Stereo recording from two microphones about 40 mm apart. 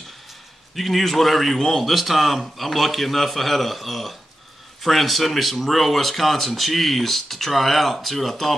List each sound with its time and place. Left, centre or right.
0.7 s speech: centre